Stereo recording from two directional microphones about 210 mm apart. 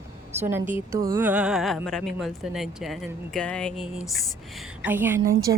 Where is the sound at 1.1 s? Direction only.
10° right (ahead or behind).